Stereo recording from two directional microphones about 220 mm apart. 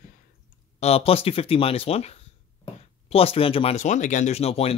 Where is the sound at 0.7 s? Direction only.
30° left (ahead or behind).